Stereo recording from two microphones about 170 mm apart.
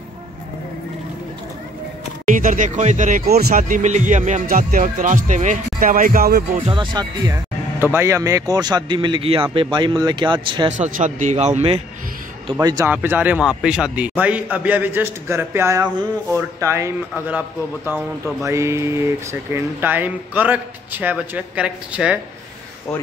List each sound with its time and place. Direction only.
2.2 s speech: 50° right (ahead or behind)
6.7 s speech: 25° right (ahead or behind)
7.8 s speech: 15° right (ahead or behind)
10.8 s speech: 45° right (ahead or behind)
12.5 s a man's voice: 20° right (ahead or behind)